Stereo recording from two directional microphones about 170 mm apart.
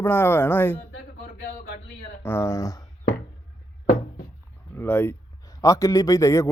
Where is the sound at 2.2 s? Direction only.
15° left (ahead or behind).